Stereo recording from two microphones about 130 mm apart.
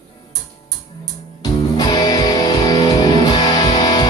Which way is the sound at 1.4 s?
30° left (ahead or behind).